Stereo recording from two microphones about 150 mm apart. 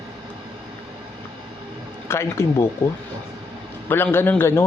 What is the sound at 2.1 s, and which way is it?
Speech, 15° left (ahead or behind).